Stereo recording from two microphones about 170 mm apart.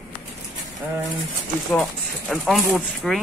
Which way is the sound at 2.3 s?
5° left (ahead or behind).